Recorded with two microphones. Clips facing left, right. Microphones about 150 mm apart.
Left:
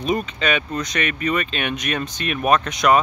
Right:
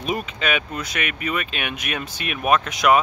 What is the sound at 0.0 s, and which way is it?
Speech, 5° right (ahead or behind).